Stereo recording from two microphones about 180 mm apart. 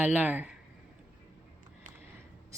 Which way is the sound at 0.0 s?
10° right (ahead or behind).